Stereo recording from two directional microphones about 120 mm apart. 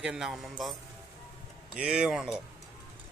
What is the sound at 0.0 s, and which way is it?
Speech, 5° right (ahead or behind).